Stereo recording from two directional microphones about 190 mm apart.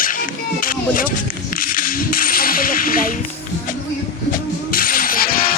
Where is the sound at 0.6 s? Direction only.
45° left (ahead or behind).